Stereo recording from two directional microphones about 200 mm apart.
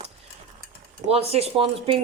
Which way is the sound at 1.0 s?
30° right (ahead or behind).